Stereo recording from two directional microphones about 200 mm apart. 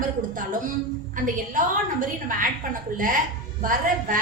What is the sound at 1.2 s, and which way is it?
A woman's voice, 40° right (ahead or behind).